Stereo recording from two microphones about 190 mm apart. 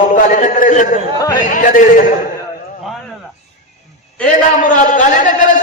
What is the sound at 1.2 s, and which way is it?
Speech, 20° left (ahead or behind).